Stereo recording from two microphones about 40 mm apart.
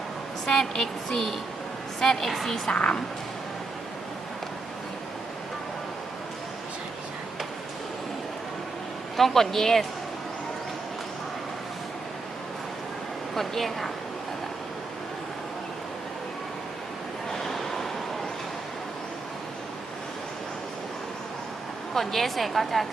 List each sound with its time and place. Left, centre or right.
0.4 s a woman's voice: centre
2.6 s a woman's voice: left
9.1 s a woman's voice: centre
13.3 s a woman's voice: centre
17.3 s waves: centre
21.9 s a woman's voice: centre